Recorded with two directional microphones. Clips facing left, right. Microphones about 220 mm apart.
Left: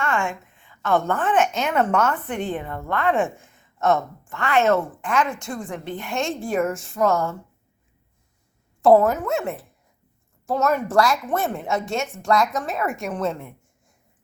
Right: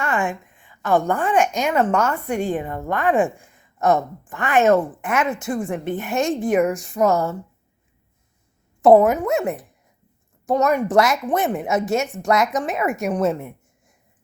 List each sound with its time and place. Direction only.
0.0 s a woman's voice: 15° right (ahead or behind)
3.5 s a sound: centre (ahead or behind)
4.3 s a woman's voice: 15° right (ahead or behind)
8.8 s a woman's voice: 20° right (ahead or behind)
10.4 s a woman's voice: 15° right (ahead or behind)
11.9 s a woman's voice: centre (ahead or behind)
12.2 s a woman's voice: 20° right (ahead or behind)
12.8 s a woman's voice: centre (ahead or behind)